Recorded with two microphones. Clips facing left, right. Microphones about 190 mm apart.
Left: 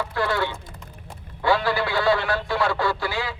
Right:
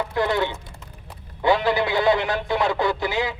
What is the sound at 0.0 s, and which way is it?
Speech, 20° right (ahead or behind).